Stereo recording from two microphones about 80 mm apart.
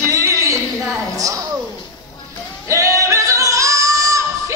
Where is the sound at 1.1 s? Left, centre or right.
Right.